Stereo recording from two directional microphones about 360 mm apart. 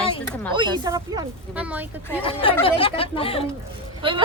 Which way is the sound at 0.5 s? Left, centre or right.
Centre.